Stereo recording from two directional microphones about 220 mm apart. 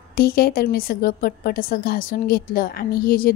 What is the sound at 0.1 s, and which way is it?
A woman's voice, 45° left (ahead or behind).